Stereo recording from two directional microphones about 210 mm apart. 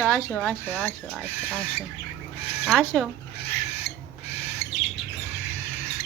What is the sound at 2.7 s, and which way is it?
Speech, 10° left (ahead or behind).